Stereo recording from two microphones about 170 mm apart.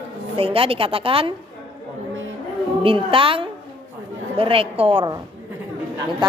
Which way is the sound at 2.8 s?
30° right (ahead or behind).